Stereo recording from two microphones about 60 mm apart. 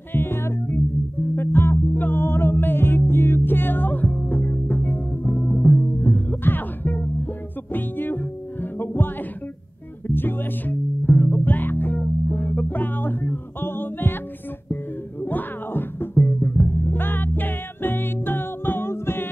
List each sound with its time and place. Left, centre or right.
0.1 s music: left